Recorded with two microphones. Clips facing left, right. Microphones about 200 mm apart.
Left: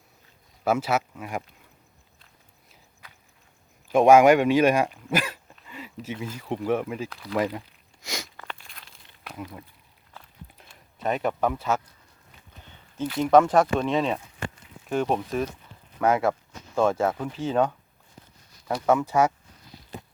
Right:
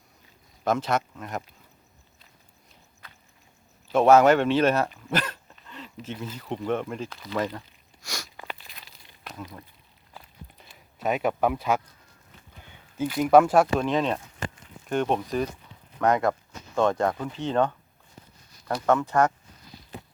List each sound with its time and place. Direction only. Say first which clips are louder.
0.6 s speech: left 1 dB; 10° left (ahead or behind)
3.8 s speech: left 2 dB; 15° left (ahead or behind)
8.0 s a sound: left 3 dB; 20° left (ahead or behind)
8.4 s crumpling: right 1 dB; 5° right (ahead or behind)
10.6 s speech: even; centre (ahead or behind)